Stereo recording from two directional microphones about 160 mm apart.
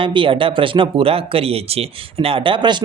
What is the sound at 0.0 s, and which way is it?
Speech, 30° right (ahead or behind).